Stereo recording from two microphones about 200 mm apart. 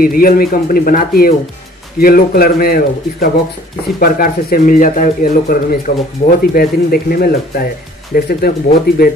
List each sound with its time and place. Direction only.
0.0 s speech: 45° left (ahead or behind)